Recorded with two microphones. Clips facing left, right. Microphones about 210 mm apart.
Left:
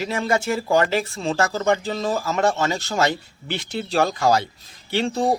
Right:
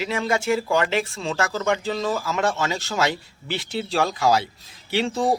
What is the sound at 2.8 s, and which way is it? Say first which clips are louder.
Speech: left 2 dB; centre (ahead or behind).